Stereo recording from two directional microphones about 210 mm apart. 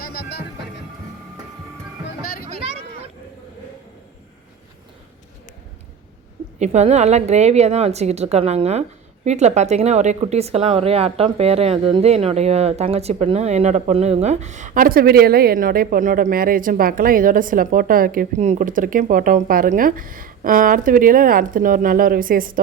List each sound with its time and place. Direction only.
0.0 s music: 50° left (ahead or behind)
2.0 s music: 45° left (ahead or behind)
2.6 s a sound: 30° right (ahead or behind)
6.6 s speech: 30° right (ahead or behind)